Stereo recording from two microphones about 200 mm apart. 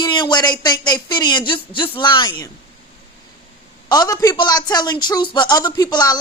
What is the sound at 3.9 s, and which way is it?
Speech, 20° left (ahead or behind).